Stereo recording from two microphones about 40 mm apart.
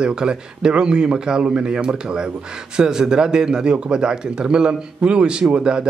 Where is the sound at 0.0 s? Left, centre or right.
Right.